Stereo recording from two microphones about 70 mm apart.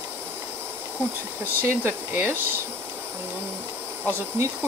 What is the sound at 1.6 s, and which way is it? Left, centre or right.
Speech, right.